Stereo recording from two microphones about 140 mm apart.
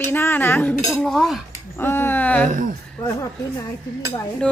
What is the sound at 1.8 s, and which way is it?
Speech, 15° left (ahead or behind).